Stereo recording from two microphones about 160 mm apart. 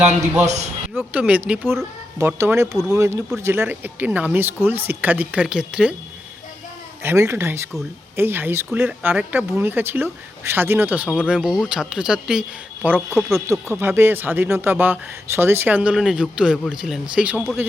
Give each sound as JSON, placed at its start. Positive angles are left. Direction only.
{"t": 0.4, "sound": "a man's voice", "side_deg": -45}
{"t": 0.9, "sound": "speech", "side_deg": -10}
{"t": 7.0, "sound": "a man's voice", "side_deg": -15}
{"t": 13.5, "sound": "speech", "side_deg": -15}